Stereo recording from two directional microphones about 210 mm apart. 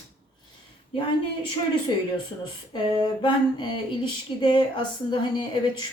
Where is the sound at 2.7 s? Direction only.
20° left (ahead or behind).